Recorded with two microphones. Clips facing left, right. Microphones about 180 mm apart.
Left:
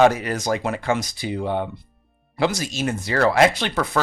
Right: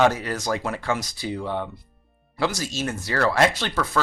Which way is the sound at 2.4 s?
20° left (ahead or behind).